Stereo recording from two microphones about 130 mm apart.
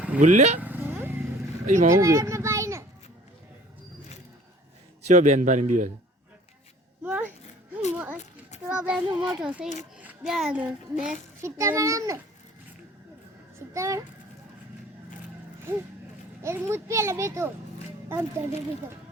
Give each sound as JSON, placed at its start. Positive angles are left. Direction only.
{"t": 0.2, "sound": "a man's voice", "side_deg": -65}
{"t": 0.6, "sound": "vehicle", "side_deg": -15}
{"t": 1.6, "sound": "speech", "side_deg": -80}
{"t": 2.0, "sound": "children playing", "side_deg": -25}
{"t": 5.0, "sound": "a man's voice", "side_deg": -65}
{"t": 7.0, "sound": "a sound", "side_deg": -15}
{"t": 7.9, "sound": "a child's voice", "side_deg": -15}
{"t": 8.2, "sound": "children playing", "side_deg": 60}
{"t": 8.6, "sound": "a child's voice", "side_deg": -10}
{"t": 11.4, "sound": "a child's voice", "side_deg": -20}
{"t": 13.7, "sound": "a child's voice", "side_deg": -25}
{"t": 16.4, "sound": "a child's voice", "side_deg": -20}